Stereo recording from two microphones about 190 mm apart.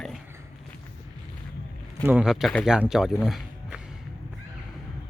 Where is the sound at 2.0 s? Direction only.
5° right (ahead or behind).